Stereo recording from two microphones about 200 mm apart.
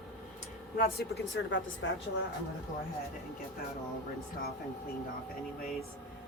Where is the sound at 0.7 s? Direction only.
50° left (ahead or behind).